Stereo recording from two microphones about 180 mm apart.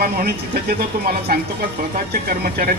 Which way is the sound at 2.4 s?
60° right (ahead or behind).